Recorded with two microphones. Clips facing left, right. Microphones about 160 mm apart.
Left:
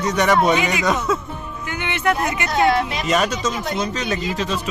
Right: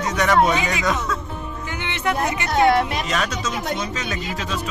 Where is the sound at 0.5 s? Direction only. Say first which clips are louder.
Left 3 dB; 20° left (ahead or behind).